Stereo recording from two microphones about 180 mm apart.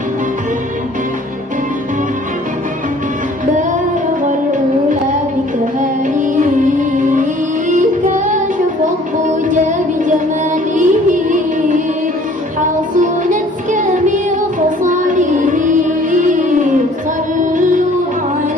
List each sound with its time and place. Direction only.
5.8 s music: 45° right (ahead or behind)
12.5 s music: 45° right (ahead or behind)